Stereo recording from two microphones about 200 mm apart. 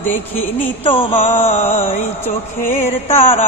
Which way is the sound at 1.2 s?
10° left (ahead or behind).